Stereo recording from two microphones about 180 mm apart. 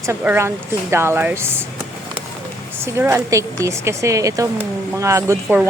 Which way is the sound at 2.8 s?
15° right (ahead or behind).